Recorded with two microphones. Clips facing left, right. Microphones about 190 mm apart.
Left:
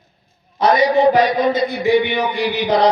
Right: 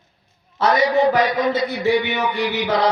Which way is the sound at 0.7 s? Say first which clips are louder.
Left 3 dB; 35° left (ahead or behind).